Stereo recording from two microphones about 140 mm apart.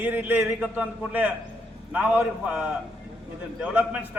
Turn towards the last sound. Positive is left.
turn(degrees=-10)  # may be behind; listen again after turning